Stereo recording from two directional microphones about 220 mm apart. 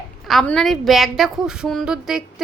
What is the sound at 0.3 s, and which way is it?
A woman's voice, centre (ahead or behind).